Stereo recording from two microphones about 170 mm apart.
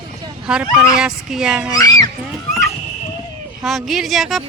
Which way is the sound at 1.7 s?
20° left (ahead or behind).